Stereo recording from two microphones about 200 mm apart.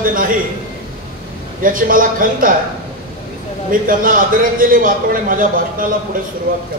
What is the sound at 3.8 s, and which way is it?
A man's voice, 45° right (ahead or behind).